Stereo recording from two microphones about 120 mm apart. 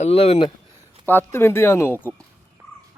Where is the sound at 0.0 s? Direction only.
60° left (ahead or behind).